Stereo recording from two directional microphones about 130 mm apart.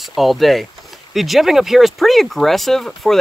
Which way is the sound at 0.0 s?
Centre (ahead or behind).